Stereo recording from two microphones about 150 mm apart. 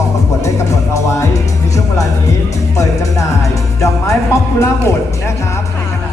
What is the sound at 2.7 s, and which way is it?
Music, 20° left (ahead or behind).